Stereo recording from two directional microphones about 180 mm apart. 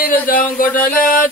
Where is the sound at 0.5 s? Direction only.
50° left (ahead or behind).